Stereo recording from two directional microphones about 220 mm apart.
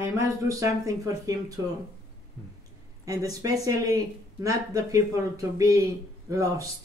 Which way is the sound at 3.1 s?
15° right (ahead or behind).